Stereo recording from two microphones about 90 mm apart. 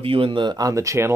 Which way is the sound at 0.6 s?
35° right (ahead or behind).